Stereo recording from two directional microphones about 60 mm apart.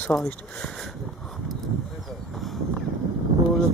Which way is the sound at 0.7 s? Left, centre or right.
Centre.